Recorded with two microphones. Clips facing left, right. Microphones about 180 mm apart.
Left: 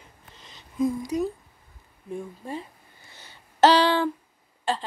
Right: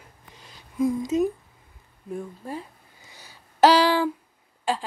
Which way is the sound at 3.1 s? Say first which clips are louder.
Right 1 dB; 10° right (ahead or behind).